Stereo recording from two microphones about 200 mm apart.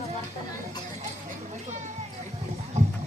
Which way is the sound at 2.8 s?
35° right (ahead or behind).